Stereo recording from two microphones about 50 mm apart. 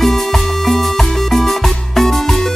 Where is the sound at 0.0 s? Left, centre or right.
Centre.